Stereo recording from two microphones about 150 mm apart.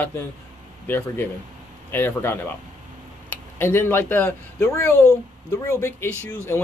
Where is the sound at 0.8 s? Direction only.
15° left (ahead or behind).